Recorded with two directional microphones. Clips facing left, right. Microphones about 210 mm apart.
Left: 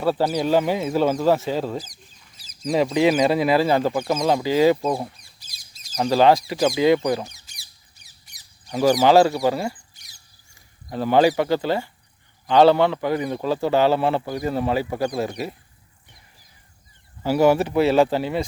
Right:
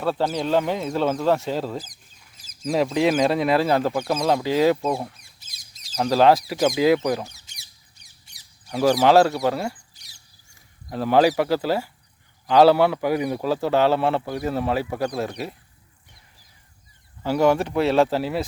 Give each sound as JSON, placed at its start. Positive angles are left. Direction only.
{"t": 0.0, "sound": "a man's voice", "side_deg": 5}
{"t": 5.4, "sound": "a sound", "side_deg": -20}
{"t": 6.0, "sound": "a man's voice", "side_deg": 0}
{"t": 7.4, "sound": "rodents", "side_deg": -25}
{"t": 8.2, "sound": "a sound", "side_deg": -25}
{"t": 8.8, "sound": "a man's voice", "side_deg": 0}
{"t": 9.9, "sound": "rodents", "side_deg": -35}
{"t": 10.8, "sound": "a man's voice", "side_deg": 0}
{"t": 17.2, "sound": "a man's voice", "side_deg": 5}